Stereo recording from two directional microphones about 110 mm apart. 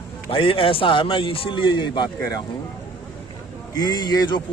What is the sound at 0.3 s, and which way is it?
A man's voice, 55° left (ahead or behind).